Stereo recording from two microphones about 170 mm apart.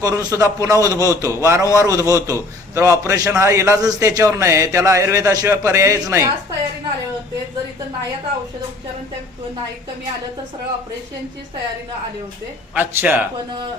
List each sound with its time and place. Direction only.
0.0 s a man's voice: 20° right (ahead or behind)
12.7 s a man's voice: 10° right (ahead or behind)